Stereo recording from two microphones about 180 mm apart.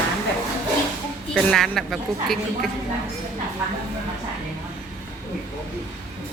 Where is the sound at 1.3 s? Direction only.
Centre (ahead or behind).